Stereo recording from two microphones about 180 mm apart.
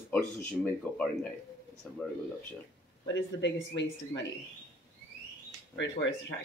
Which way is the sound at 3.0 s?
85° left.